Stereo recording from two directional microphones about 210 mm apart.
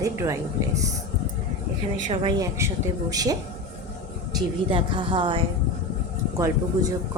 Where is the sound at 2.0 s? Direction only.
25° right (ahead or behind).